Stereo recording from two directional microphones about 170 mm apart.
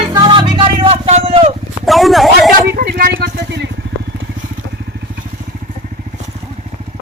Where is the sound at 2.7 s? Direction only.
60° right (ahead or behind); by 5.1 s 80° right.